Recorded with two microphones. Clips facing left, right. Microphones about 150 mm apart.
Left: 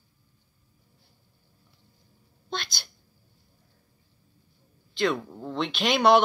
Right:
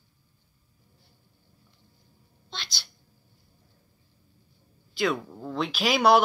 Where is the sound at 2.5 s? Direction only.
50° left (ahead or behind).